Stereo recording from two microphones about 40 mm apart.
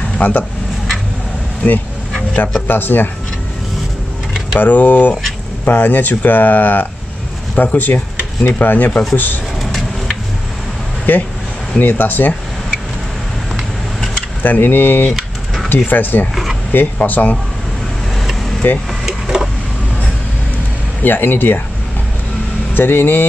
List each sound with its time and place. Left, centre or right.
0.2 s speech: left
2.7 s speech: left
4.6 s speech: left
11.1 s speech: left
14.4 s speech: left
15.1 s a sound: centre
15.7 s speech: left
18.6 s speech: left
19.0 s a sound: centre
21.0 s speech: left
22.8 s speech: left